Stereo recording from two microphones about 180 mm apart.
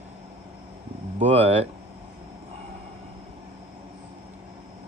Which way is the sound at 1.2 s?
35° right (ahead or behind).